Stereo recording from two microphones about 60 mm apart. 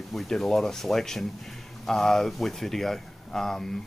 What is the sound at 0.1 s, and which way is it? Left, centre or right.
Speech, centre.